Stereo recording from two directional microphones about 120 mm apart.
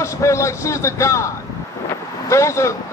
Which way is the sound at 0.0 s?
25° left (ahead or behind).